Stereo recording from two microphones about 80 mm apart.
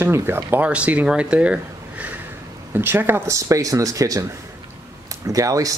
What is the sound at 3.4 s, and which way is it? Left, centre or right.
Speech, right.